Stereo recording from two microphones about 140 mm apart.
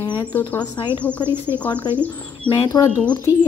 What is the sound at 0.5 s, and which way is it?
Speech, 30° left (ahead or behind).